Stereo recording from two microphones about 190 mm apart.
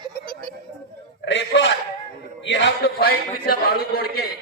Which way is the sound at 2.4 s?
70° left (ahead or behind).